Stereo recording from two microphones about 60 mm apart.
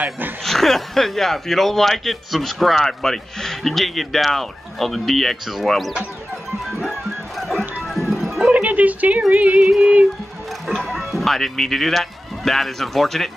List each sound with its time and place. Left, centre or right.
0.4 s speech: centre
6.8 s music: centre
8.5 s music: right
10.9 s speech: centre